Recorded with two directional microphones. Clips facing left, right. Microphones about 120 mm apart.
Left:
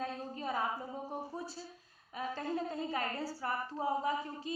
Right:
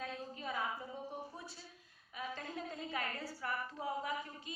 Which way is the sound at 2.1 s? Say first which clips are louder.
Left 7 dB; 40° left (ahead or behind).